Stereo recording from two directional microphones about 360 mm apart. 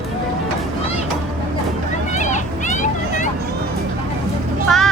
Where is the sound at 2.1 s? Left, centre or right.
Centre.